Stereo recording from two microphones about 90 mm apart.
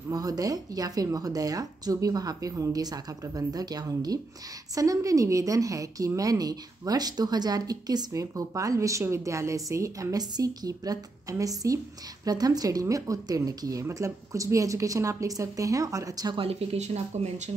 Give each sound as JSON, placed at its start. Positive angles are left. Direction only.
{"t": 0.1, "sound": "a woman's voice", "side_deg": -45}
{"t": 16.3, "sound": "speech", "side_deg": -90}